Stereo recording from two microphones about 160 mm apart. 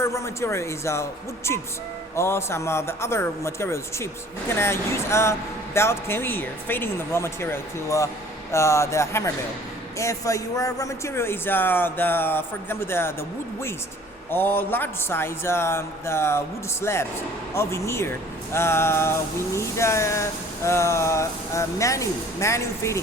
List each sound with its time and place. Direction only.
0.0 s speech: 15° left (ahead or behind)
2.1 s speech: 15° left (ahead or behind)
14.3 s speech: 15° left (ahead or behind)